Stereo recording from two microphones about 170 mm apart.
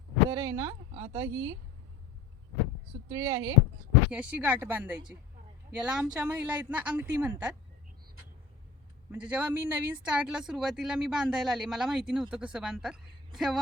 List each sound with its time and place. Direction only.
0.3 s speech: 20° right (ahead or behind)
3.1 s speech: 20° right (ahead or behind)
4.1 s a woman's voice: 10° right (ahead or behind)
9.1 s speech: 5° right (ahead or behind)